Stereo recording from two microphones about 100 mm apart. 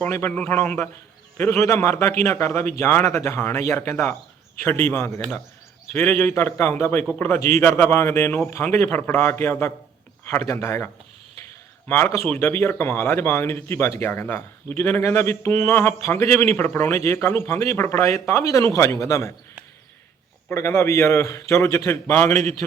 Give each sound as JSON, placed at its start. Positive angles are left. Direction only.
{"t": 0.1, "sound": "speech", "side_deg": 25}
{"t": 11.9, "sound": "speech", "side_deg": 25}
{"t": 20.5, "sound": "speech", "side_deg": 25}